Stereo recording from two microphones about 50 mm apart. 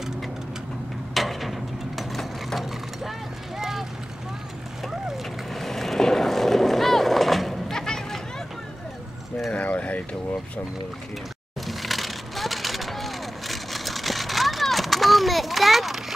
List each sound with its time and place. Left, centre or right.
1.1 s a sound: centre
3.5 s vehicle: centre
5.0 s boat: centre
7.7 s a sound: centre
9.5 s mechanisms: left
11.6 s vehicle: centre